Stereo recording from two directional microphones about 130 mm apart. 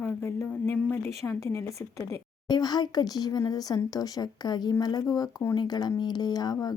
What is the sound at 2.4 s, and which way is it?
A woman's voice, 30° left (ahead or behind).